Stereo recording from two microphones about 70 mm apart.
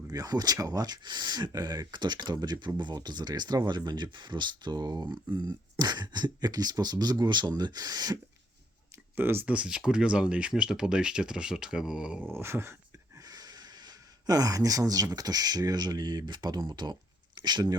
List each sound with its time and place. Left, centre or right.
0.1 s speech: right
5.8 s speech: right
9.1 s dog: right
9.5 s speech: centre
12.3 s dog: right
13.1 s speech: right